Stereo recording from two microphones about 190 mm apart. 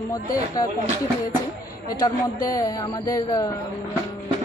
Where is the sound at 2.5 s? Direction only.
20° left (ahead or behind).